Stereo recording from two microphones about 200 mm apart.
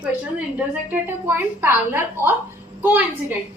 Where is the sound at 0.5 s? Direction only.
10° right (ahead or behind).